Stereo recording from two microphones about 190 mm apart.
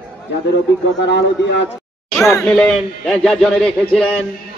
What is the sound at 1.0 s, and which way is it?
Speech, 65° left (ahead or behind).